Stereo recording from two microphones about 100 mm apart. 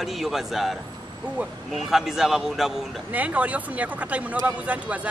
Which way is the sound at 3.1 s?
15° right (ahead or behind).